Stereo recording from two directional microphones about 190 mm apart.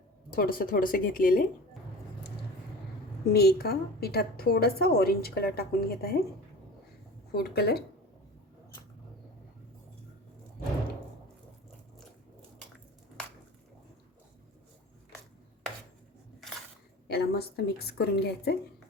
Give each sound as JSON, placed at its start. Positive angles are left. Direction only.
{"t": 0.3, "sound": "speech", "side_deg": 50}
{"t": 3.3, "sound": "a woman's voice", "side_deg": 55}
{"t": 7.3, "sound": "a woman's voice", "side_deg": 55}
{"t": 17.1, "sound": "a woman's voice", "side_deg": 55}